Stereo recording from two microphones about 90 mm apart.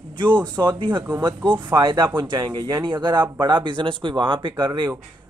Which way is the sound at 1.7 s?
60° right (ahead or behind).